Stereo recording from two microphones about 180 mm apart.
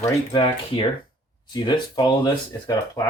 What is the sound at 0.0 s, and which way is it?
Speech, 25° left (ahead or behind).